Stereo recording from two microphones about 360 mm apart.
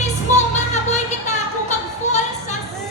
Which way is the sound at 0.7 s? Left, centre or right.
Centre.